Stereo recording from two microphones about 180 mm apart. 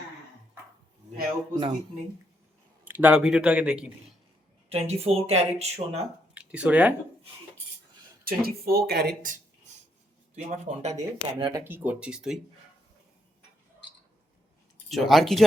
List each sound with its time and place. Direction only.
2.8 s speech: 10° right (ahead or behind)
4.7 s speech: 35° right (ahead or behind)
6.3 s speech: 5° right (ahead or behind)
8.2 s speech: 55° right (ahead or behind)
10.3 s speech: 40° right (ahead or behind)
10.9 s speech: 20° right (ahead or behind)
11.6 s speech: 10° right (ahead or behind)
14.8 s speech: centre (ahead or behind)